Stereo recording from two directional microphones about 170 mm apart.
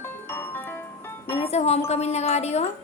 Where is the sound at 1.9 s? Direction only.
40° left (ahead or behind).